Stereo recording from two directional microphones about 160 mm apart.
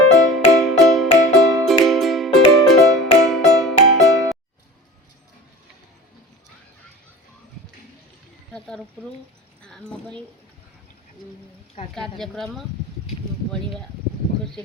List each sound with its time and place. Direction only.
0.2 s music: centre (ahead or behind)
8.5 s a sound: 5° left (ahead or behind)
9.6 s speech: 5° left (ahead or behind)
11.9 s a woman's voice: 5° left (ahead or behind)